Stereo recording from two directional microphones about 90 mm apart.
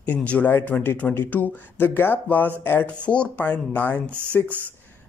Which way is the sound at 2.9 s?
10° left (ahead or behind).